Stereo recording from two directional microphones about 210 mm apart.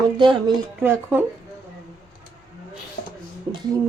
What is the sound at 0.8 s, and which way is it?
Speech, 10° right (ahead or behind).